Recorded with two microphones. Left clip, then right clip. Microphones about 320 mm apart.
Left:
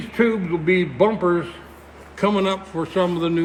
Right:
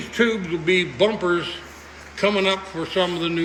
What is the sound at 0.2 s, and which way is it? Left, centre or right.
Speech, left.